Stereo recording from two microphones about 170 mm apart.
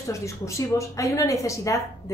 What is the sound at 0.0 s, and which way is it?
Speech, 15° left (ahead or behind).